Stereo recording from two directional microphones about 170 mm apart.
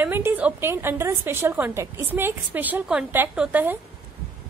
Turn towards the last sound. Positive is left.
turn(degrees=-10)  # may be behind; listen again after turning